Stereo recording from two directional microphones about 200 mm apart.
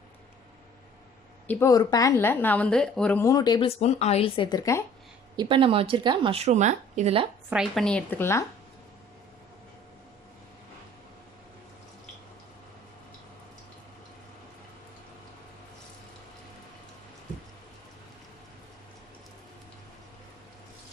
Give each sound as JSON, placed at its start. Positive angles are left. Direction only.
{"t": 1.5, "sound": "a woman's voice", "side_deg": 15}
{"t": 5.4, "sound": "speech", "side_deg": -25}
{"t": 7.5, "sound": "a woman's voice", "side_deg": 0}